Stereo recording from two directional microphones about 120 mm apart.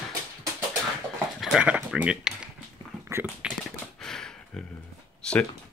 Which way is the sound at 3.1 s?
20° right (ahead or behind).